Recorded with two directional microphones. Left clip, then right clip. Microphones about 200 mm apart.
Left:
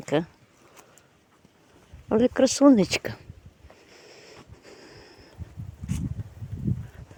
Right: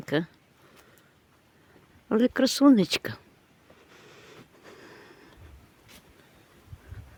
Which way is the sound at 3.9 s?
20° right (ahead or behind).